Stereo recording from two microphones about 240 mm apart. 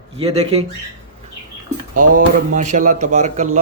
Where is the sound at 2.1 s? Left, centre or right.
Right.